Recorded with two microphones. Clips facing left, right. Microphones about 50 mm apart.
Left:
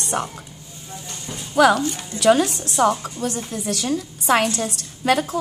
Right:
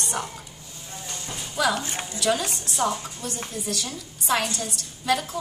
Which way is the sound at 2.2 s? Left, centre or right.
Left.